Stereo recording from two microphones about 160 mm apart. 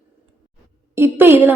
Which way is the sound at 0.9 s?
15° right (ahead or behind).